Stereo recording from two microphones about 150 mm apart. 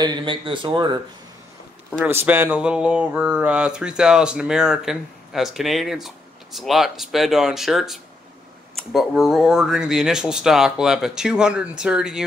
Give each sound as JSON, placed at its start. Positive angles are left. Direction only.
{"t": 0.0, "sound": "speech", "side_deg": -30}
{"t": 2.0, "sound": "speech", "side_deg": -15}